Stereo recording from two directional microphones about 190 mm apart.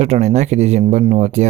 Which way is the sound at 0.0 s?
35° right (ahead or behind).